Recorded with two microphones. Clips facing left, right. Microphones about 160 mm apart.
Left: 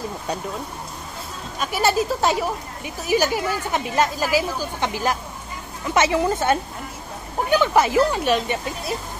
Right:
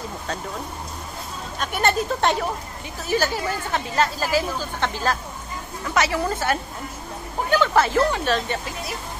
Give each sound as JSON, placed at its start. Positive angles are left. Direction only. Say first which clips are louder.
{"t": 1.6, "sound": "a woman's voice", "louder": "left 2 dB", "side_deg": 5}